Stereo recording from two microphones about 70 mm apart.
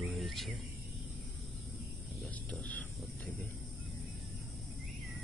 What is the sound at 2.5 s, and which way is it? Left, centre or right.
Speech, left.